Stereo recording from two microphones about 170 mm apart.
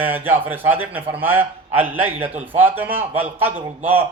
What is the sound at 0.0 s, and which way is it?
Speech, 10° right (ahead or behind).